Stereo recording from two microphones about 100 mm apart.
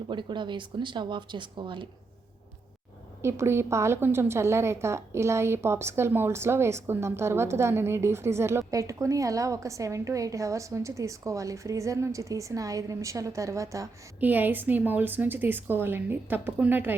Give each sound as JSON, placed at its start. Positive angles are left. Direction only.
{"t": 0.1, "sound": "speech", "side_deg": -50}
{"t": 3.2, "sound": "a woman's voice", "side_deg": -25}
{"t": 14.2, "sound": "a woman's voice", "side_deg": -15}